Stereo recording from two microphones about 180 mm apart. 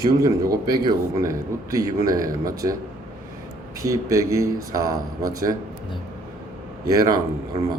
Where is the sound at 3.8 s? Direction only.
15° right (ahead or behind).